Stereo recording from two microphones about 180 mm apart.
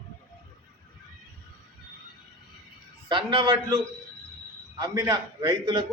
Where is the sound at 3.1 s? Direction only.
25° right (ahead or behind).